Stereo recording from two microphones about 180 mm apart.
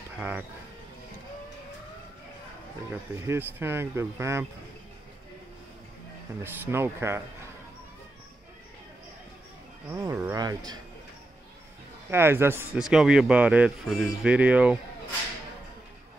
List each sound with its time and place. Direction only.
0.2 s speech: 5° right (ahead or behind)
3.2 s speech: 15° right (ahead or behind)
6.4 s speech: 15° right (ahead or behind)
9.8 s a man's voice: 15° right (ahead or behind)
12.1 s speech: 15° right (ahead or behind)